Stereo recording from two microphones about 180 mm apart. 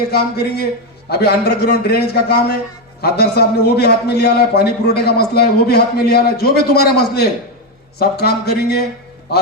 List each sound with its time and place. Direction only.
0.1 s a man's voice: 60° left (ahead or behind)